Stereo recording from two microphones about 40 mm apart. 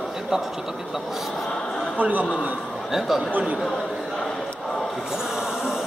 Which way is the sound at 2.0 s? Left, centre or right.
Right.